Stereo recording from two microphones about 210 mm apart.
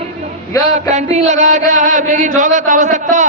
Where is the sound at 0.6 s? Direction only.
35° right (ahead or behind).